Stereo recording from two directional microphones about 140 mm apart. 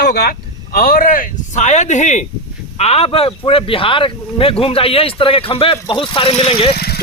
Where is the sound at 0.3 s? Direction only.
90° left; by 2.2 s 55° left (ahead or behind).